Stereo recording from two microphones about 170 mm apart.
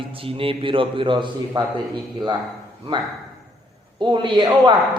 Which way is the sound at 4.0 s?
30° right (ahead or behind).